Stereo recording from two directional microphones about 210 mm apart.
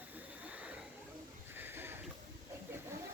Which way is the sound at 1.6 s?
10° right (ahead or behind).